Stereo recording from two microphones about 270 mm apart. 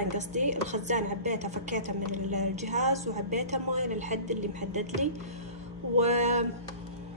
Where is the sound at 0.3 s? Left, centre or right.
Right.